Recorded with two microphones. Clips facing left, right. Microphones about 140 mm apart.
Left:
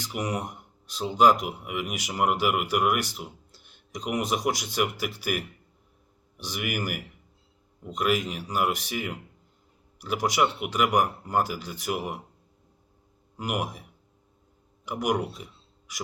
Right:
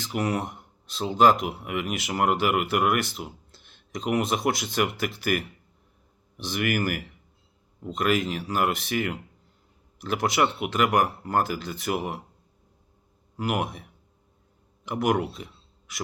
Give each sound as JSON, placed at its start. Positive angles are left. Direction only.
{"t": 0.2, "sound": "speech", "side_deg": 15}
{"t": 14.9, "sound": "speech", "side_deg": 10}